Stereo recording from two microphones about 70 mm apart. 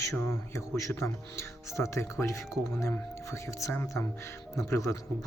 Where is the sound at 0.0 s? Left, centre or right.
Left.